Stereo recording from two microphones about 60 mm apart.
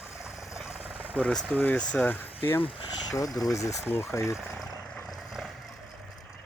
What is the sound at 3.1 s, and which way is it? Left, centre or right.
Speech, left.